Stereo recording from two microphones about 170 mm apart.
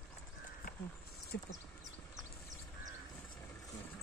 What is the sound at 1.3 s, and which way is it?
Speech, 90° left.